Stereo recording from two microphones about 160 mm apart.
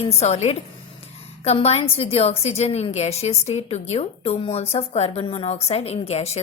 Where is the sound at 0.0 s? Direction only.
40° left (ahead or behind).